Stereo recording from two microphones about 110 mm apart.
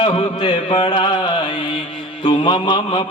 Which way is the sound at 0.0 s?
50° left (ahead or behind).